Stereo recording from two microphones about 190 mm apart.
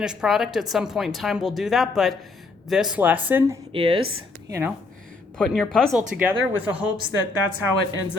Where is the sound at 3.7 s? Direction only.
30° right (ahead or behind).